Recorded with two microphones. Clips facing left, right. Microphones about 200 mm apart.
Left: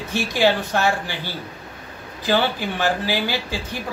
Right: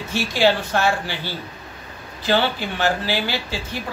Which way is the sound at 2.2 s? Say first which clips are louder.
Even; 15° left (ahead or behind).